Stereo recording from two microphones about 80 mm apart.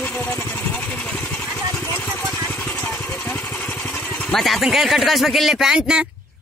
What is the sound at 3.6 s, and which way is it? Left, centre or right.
Vehicle, left.